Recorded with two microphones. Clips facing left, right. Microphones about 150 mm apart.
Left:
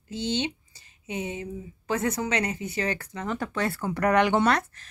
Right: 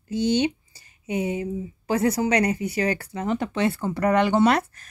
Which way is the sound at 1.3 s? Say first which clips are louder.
Right 7 dB; 35° right (ahead or behind).